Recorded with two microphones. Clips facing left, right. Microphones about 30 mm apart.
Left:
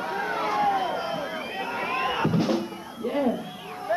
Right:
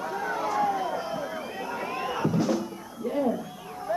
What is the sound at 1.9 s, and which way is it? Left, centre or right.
Crowd, left.